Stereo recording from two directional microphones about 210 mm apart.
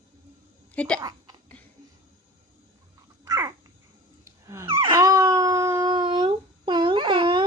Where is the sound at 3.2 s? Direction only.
20° right (ahead or behind).